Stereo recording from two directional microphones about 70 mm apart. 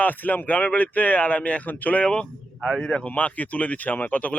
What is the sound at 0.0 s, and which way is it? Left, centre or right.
Speech, left.